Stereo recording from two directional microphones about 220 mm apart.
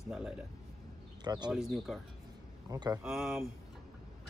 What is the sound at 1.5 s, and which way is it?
Speech, centre (ahead or behind).